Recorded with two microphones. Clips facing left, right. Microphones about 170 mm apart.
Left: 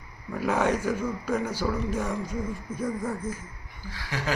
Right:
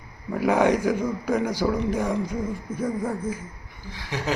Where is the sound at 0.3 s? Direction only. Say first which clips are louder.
Right 5 dB; 15° right (ahead or behind).